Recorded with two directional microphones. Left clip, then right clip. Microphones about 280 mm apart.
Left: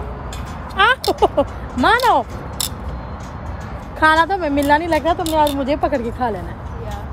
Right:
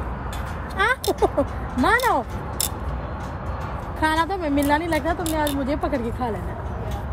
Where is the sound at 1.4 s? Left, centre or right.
Centre.